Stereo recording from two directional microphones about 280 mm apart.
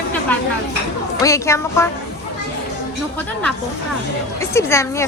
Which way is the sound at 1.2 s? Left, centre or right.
Centre.